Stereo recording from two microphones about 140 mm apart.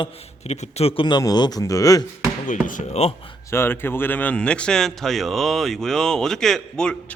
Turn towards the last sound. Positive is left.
turn(degrees=5)  # may be behind; listen again after turning